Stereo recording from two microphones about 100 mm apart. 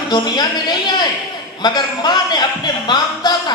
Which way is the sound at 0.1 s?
45° left (ahead or behind).